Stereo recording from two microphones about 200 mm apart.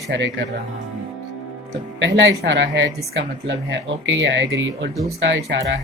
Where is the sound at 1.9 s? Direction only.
65° right (ahead or behind).